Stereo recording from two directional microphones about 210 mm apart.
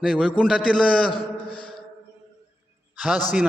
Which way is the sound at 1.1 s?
25° left (ahead or behind).